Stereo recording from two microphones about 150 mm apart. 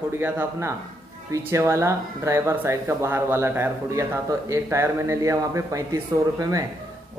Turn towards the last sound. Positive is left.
turn(degrees=-25)  # may be behind; listen again after turning